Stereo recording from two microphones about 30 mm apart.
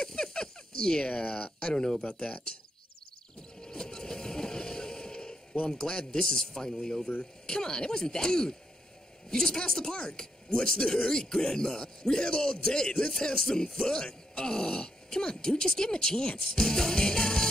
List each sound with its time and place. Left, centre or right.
0.0 s a sound: left
1.0 s speech: left
1.3 s speech: left
3.6 s vehicle: left
5.7 s speech: left
16.5 s music: left